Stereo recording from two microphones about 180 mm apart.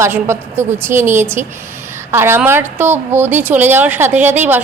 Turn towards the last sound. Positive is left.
turn(degrees=-10)  # may be behind; listen again after turning